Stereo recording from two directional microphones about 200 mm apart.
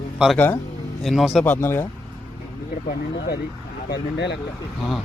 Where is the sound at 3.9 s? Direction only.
55° left (ahead or behind).